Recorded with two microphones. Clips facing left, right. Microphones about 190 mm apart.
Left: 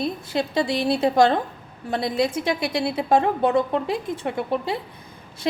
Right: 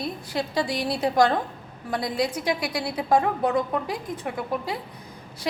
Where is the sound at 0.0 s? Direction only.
25° left (ahead or behind).